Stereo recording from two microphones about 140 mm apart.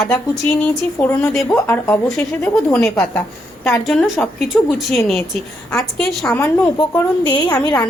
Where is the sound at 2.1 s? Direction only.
5° left (ahead or behind).